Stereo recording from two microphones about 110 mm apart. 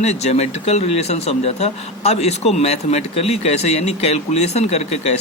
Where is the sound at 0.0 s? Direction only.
85° left.